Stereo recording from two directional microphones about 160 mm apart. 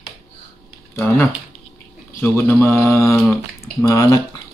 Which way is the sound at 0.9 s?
15° left (ahead or behind).